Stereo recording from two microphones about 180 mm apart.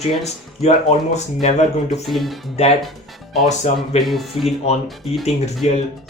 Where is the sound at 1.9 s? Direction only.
Centre (ahead or behind).